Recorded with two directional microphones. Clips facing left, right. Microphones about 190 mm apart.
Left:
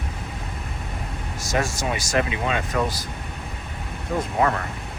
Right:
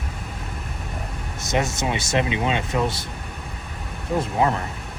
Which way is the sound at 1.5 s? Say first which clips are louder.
Right 1 dB; 20° right (ahead or behind).